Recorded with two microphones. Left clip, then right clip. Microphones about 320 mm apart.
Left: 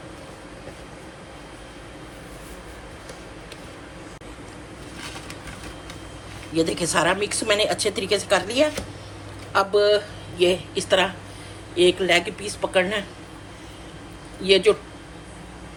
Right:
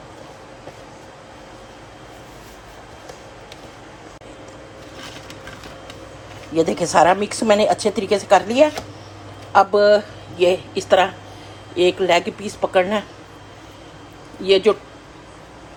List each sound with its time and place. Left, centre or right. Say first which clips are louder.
6.6 s a woman's voice: right 7 dB; centre
14.4 s a woman's voice: right 2 dB; right